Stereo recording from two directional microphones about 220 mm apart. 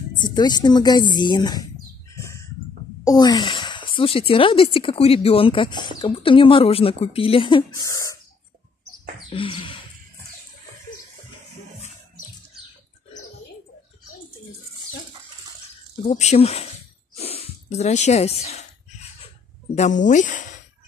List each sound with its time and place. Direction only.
0.2 s speech: 20° left (ahead or behind)
2.1 s bird: 15° left (ahead or behind)
3.0 s speech: 15° left (ahead or behind)
9.3 s a sound: 25° left (ahead or behind)
16.1 s speech: 30° left (ahead or behind)
17.1 s snort: 25° left (ahead or behind)
19.2 s a sound: 30° left (ahead or behind)